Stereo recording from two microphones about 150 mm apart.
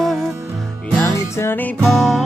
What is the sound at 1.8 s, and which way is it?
Music, centre (ahead or behind).